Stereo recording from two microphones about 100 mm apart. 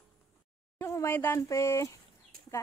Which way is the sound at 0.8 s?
25° left (ahead or behind).